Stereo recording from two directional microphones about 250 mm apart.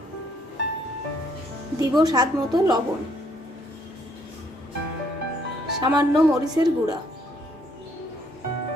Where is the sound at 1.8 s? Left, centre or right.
Centre.